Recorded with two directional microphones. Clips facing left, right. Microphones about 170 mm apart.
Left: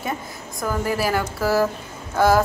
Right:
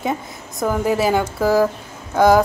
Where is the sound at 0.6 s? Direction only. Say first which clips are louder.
Right 5 dB; 20° right (ahead or behind).